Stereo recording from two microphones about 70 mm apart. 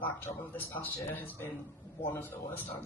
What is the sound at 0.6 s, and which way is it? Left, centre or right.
A man's voice, left.